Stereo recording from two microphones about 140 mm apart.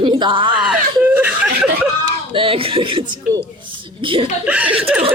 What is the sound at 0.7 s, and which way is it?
Speech, 10° right (ahead or behind).